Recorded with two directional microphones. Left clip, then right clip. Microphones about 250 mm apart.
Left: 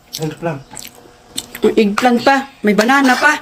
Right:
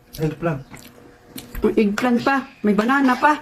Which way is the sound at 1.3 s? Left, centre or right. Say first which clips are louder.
Left 6 dB; centre.